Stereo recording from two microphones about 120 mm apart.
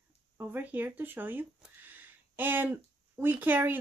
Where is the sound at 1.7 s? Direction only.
15° right (ahead or behind).